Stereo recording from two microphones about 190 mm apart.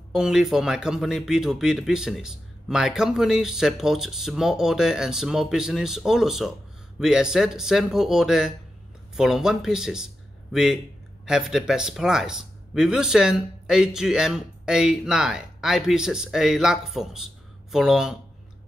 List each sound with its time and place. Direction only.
0.1 s speech: 5° right (ahead or behind)